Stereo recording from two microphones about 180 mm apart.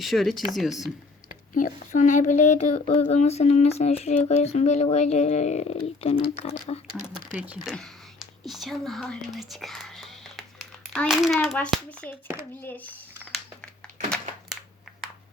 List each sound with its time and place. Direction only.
0.0 s speech: centre (ahead or behind)
1.5 s speech: 45° left (ahead or behind)
7.3 s a child's voice: 10° right (ahead or behind); by 12.9 s 10° left (ahead or behind)
13.3 s a sound: 5° left (ahead or behind)